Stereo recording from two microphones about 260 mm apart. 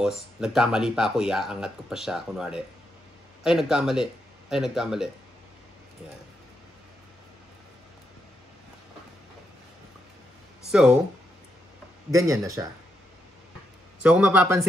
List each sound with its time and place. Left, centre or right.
0.0 s speech: centre
10.7 s speech: centre
12.1 s speech: centre
14.0 s speech: centre